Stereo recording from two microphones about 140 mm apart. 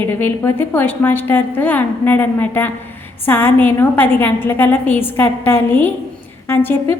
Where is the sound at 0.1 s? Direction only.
15° left (ahead or behind).